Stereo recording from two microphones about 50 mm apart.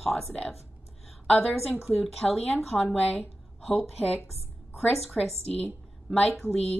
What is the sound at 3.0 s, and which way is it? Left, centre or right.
Speech, left.